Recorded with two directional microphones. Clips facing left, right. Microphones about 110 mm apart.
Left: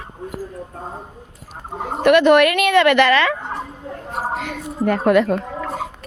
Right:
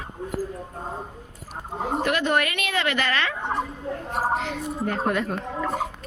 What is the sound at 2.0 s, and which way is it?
A woman's voice, 75° left (ahead or behind).